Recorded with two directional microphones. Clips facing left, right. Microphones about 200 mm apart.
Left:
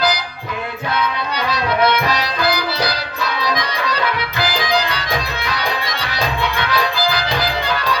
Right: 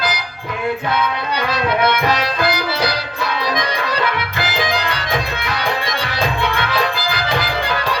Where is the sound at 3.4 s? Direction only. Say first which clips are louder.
Even; 25° right (ahead or behind).